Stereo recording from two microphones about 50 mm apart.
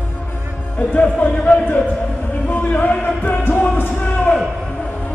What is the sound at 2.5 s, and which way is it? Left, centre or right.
Music, left.